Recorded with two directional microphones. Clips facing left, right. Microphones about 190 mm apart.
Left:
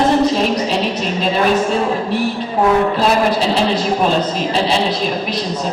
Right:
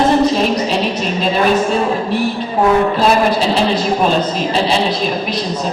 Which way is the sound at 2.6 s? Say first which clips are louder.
Right 1 dB; 25° right (ahead or behind).